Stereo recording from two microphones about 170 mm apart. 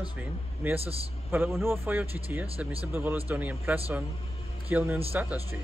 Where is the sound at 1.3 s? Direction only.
15° right (ahead or behind).